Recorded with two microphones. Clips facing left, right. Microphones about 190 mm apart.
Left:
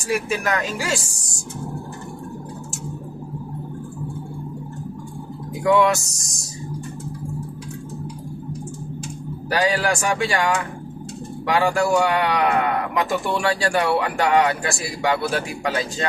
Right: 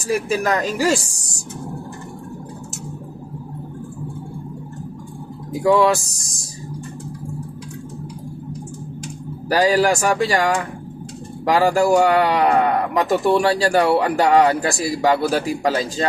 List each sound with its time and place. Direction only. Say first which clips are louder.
0.0 s speech: right 3 dB; 35° right (ahead or behind)
5.6 s speech: right 2 dB; 30° right (ahead or behind)
9.5 s speech: right 5 dB; 35° right (ahead or behind)